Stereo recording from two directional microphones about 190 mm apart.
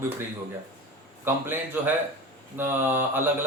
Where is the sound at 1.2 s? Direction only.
10° right (ahead or behind).